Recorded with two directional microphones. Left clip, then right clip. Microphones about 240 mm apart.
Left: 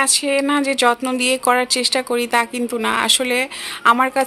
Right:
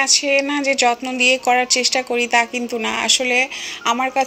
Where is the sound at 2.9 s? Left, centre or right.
Left.